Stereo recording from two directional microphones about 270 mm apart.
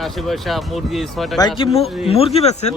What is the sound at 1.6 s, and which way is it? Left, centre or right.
Speech, left.